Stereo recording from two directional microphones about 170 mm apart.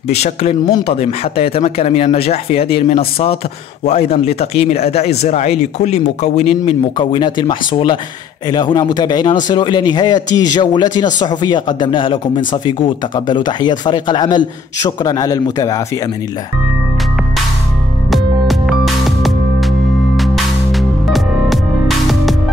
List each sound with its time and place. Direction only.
0.1 s speech: 40° left (ahead or behind); by 15.8 s 20° left (ahead or behind)
18.1 s music: centre (ahead or behind)